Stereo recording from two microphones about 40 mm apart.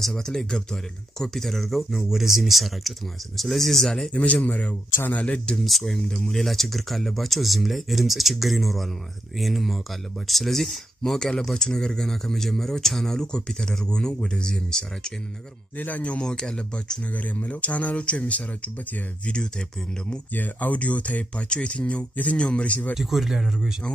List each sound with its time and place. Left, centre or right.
0.0 s speech: centre
4.1 s speech: left
5.6 s speech: centre
16.2 s speech: centre
17.4 s speech: left
20.3 s speech: left
21.5 s speech: left
21.7 s speech: left
22.4 s speech: left
22.7 s speech: left
22.9 s speech: centre